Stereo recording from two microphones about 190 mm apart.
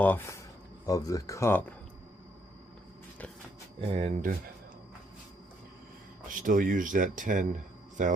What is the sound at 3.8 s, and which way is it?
Speech, 30° right (ahead or behind).